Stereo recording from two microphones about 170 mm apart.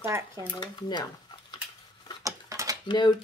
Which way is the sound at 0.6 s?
25° left (ahead or behind).